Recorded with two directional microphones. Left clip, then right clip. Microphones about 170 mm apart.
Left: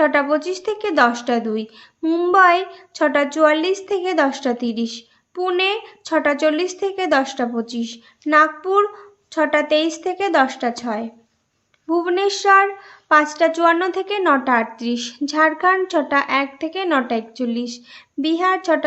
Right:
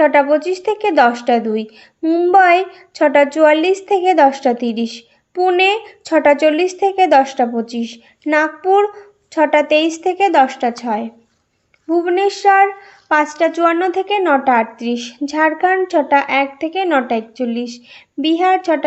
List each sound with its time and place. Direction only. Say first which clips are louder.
0.0 s a woman's voice: right 5 dB; 10° right (ahead or behind)